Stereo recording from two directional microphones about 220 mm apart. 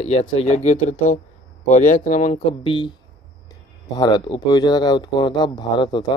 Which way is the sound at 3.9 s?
20° left (ahead or behind).